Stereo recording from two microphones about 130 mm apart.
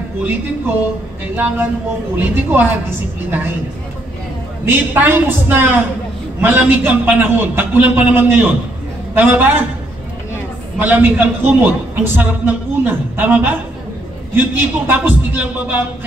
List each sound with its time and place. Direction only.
1.3 s a man's voice: 15° right (ahead or behind)
4.6 s a man's voice: 15° right (ahead or behind)
10.8 s a man's voice: 15° right (ahead or behind)